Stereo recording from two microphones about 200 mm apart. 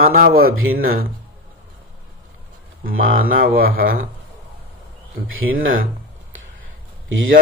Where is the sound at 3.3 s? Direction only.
45° right (ahead or behind).